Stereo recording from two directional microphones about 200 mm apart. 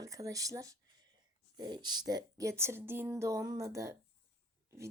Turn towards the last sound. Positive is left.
turn(degrees=-15)  # may be behind; listen again after turning